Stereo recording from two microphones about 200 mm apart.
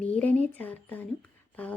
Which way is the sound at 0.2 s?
5° left (ahead or behind).